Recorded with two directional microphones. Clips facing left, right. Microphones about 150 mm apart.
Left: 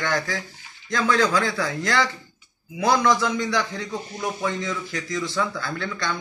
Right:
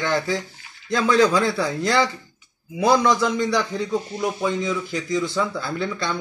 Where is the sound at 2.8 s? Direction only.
20° right (ahead or behind).